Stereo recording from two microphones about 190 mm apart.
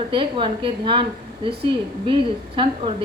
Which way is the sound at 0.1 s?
25° right (ahead or behind).